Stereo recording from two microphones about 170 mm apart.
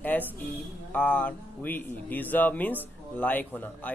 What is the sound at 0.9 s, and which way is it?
A man's voice, 10° left (ahead or behind).